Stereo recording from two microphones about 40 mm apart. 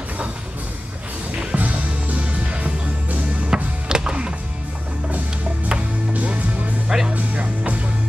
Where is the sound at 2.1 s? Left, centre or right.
Right.